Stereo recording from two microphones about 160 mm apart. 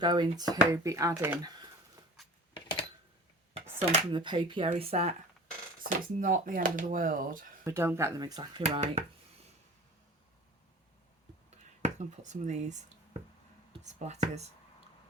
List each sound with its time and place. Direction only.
0.0 s speech: 25° right (ahead or behind)
2.6 s a sound: 30° left (ahead or behind)
4.1 s speech: 30° right (ahead or behind)
5.8 s speech: 60° right (ahead or behind)
7.6 s speech: 15° right (ahead or behind); by 9.0 s 35° right (ahead or behind)
11.5 s speech: 45° right (ahead or behind)